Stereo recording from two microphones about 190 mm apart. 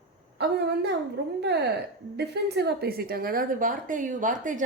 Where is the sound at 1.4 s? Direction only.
60° right (ahead or behind).